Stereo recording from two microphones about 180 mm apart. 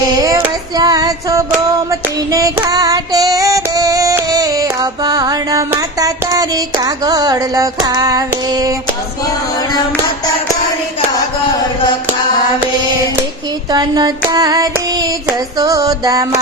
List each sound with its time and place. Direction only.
0.2 s female singing: 15° right (ahead or behind)
13.7 s child singing: 20° right (ahead or behind)